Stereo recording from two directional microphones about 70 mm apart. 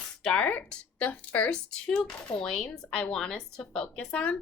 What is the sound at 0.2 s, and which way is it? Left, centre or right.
A woman's voice, centre.